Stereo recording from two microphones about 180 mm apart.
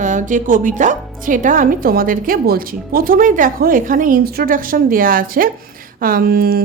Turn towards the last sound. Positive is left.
turn(degrees=-55)  # may be behind; listen again after turning